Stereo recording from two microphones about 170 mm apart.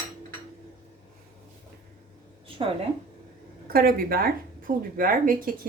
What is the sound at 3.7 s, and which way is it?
Speech, 60° right (ahead or behind).